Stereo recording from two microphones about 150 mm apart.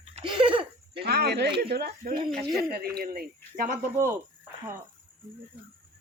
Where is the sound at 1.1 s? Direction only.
90° right.